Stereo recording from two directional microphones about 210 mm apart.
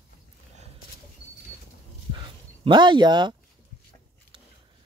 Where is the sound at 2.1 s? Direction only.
20° right (ahead or behind).